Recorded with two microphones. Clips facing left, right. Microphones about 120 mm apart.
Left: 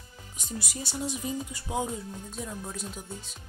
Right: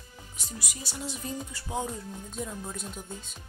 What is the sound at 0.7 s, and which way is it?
Music, 25° left (ahead or behind).